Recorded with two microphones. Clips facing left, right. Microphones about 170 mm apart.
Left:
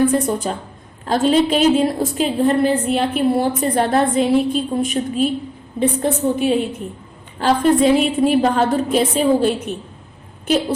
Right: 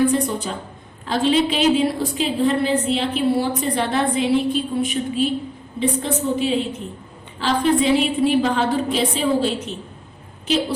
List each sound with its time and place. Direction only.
0.0 s a woman's voice: 45° left (ahead or behind)